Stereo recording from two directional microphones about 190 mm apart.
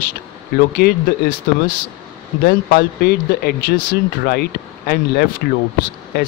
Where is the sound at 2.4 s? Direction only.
55° left (ahead or behind).